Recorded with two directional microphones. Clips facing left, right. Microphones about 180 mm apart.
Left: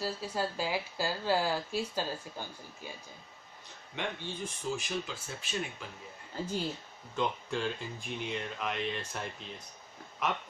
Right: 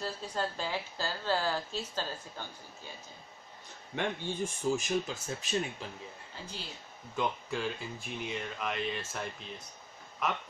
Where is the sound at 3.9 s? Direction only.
45° right (ahead or behind).